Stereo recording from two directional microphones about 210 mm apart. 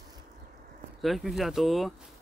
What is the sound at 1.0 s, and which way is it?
Speech, centre (ahead or behind).